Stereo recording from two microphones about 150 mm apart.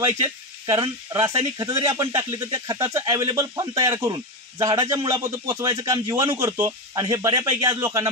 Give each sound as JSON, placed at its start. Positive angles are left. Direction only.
{"t": 0.2, "sound": "speech", "side_deg": -25}